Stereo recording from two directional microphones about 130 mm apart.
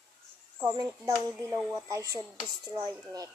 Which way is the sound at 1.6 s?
Centre (ahead or behind).